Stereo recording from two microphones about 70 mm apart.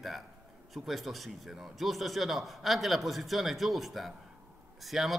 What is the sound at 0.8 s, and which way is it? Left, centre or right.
A man's voice, centre.